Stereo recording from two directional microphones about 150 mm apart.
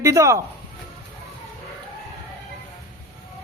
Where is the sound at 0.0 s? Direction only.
20° right (ahead or behind).